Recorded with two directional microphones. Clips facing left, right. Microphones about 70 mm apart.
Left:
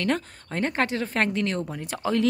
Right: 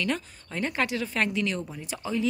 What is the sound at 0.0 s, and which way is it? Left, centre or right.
Speech, left.